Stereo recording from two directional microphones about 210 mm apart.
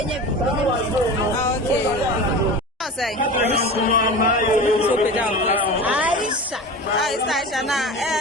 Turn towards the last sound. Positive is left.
turn(degrees=0)  # may be behind; listen again after turning